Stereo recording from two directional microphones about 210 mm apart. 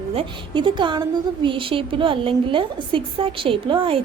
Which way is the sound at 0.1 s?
25° right (ahead or behind).